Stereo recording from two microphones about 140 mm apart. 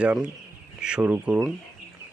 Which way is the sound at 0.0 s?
10° right (ahead or behind).